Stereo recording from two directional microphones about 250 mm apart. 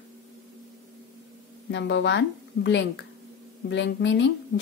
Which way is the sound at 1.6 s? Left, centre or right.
Left.